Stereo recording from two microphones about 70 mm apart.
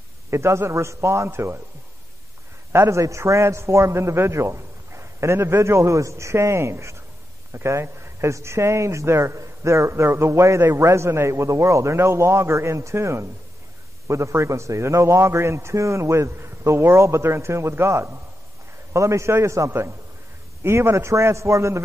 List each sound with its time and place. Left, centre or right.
0.3 s a man's voice: right
2.7 s a man's voice: right